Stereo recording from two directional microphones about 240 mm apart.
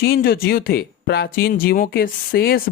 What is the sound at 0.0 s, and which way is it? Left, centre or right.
Speech, left.